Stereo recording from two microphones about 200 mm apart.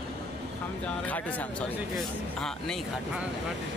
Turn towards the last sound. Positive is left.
turn(degrees=0)  # may be behind; listen again after turning